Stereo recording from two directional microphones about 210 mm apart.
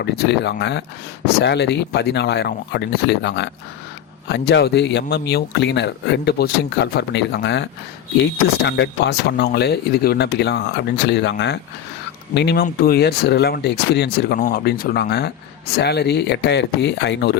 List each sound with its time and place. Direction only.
0.0 s speech: 55° left (ahead or behind)
14.3 s speech: 40° left (ahead or behind)